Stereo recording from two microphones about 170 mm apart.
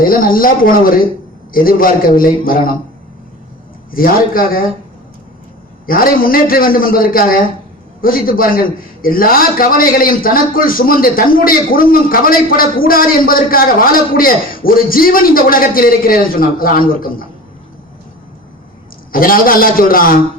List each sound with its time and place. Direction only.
0.0 s a man's voice: 55° left (ahead or behind)
3.9 s a man's voice: 60° left (ahead or behind)
5.8 s a man's voice: 60° left (ahead or behind)
19.1 s a man's voice: 55° left (ahead or behind)